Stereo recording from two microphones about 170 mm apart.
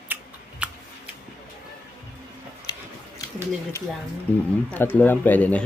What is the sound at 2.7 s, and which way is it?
Biting, 25° left (ahead or behind).